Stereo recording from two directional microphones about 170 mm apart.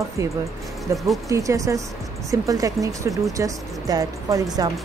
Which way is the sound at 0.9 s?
Centre (ahead or behind).